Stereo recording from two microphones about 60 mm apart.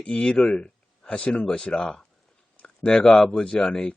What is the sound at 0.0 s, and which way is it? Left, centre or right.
Speech, centre.